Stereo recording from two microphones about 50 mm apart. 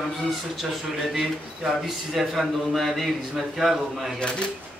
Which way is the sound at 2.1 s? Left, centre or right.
Centre.